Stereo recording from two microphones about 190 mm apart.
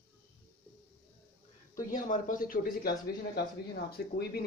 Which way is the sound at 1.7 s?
45° left (ahead or behind).